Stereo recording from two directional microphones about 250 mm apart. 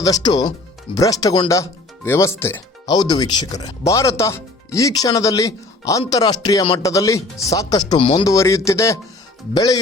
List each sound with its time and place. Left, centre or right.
0.0 s speech: centre